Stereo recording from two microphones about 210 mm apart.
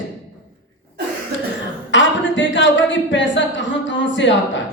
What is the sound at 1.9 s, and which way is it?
A woman's voice, 60° left (ahead or behind).